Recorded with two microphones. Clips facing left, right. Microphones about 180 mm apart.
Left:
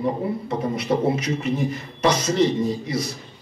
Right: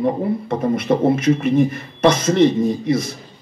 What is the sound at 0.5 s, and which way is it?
Speech, 50° right (ahead or behind).